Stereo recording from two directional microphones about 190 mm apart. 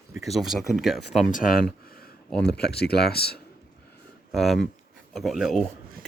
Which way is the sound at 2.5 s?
60° left (ahead or behind).